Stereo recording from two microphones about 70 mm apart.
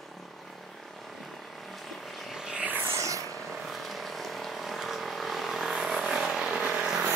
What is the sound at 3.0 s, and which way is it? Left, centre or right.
Vehicle, right.